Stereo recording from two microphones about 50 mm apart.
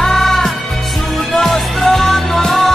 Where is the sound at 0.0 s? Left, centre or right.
Centre.